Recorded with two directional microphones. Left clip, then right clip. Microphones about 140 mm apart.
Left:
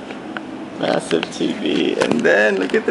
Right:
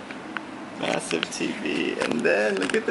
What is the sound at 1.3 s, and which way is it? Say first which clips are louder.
Speech: left 7 dB; 30° right (ahead or behind).